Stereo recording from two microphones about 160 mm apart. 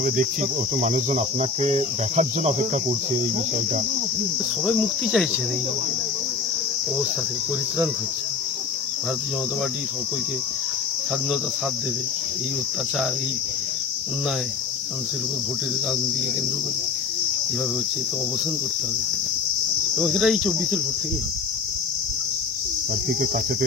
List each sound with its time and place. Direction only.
0.7 s cricket: 50° right (ahead or behind)
4.6 s cricket: centre (ahead or behind)
20.0 s cricket: centre (ahead or behind)